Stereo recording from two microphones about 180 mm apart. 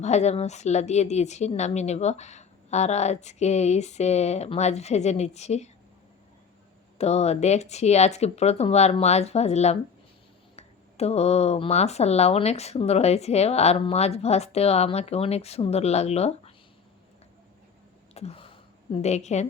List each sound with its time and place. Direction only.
0.0 s speech: 40° left (ahead or behind)
7.0 s speech: 35° left (ahead or behind)
18.1 s a sound: 35° left (ahead or behind)
19.0 s speech: 40° left (ahead or behind)